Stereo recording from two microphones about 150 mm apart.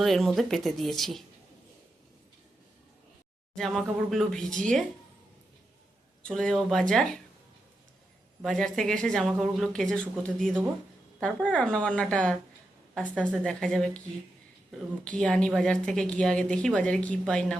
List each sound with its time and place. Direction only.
0.0 s speech: centre (ahead or behind)
3.5 s speech: centre (ahead or behind)
6.2 s speech: 5° left (ahead or behind)
8.4 s a woman's voice: centre (ahead or behind)
15.0 s a woman's voice: 10° left (ahead or behind)